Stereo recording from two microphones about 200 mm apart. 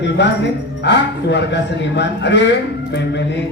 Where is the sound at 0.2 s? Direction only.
60° left (ahead or behind).